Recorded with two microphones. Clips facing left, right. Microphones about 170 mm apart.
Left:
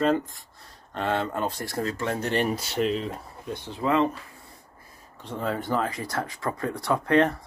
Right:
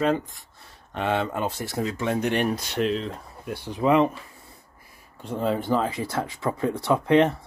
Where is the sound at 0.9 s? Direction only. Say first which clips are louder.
Right 2 dB; 15° right (ahead or behind).